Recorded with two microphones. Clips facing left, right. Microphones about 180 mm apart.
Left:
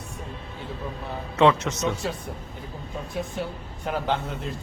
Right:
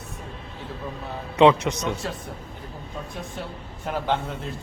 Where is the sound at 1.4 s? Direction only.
15° right (ahead or behind).